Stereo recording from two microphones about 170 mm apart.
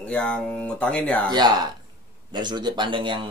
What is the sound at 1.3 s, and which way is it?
Speech, 25° right (ahead or behind).